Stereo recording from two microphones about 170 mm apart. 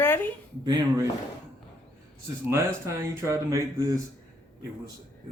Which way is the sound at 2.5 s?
15° right (ahead or behind).